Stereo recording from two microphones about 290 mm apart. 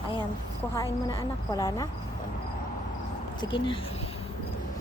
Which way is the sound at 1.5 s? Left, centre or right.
Centre.